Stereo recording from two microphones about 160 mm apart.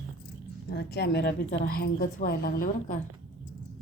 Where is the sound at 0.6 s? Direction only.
90° left; by 3.0 s 60° left (ahead or behind).